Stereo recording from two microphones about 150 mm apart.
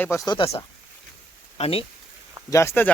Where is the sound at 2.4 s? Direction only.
20° left (ahead or behind).